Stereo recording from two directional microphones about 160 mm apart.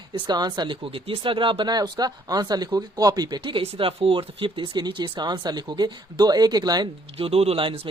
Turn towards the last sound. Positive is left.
turn(degrees=-35)  # may be behind; listen again after turning